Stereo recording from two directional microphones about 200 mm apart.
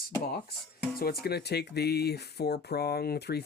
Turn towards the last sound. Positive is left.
turn(degrees=55)  # may be behind; listen again after turning